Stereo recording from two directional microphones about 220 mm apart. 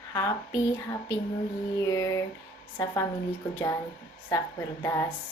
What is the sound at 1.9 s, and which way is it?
Speech, 15° left (ahead or behind).